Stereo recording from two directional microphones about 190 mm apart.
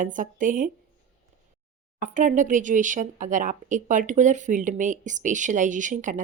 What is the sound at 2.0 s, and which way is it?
Speech, 40° right (ahead or behind).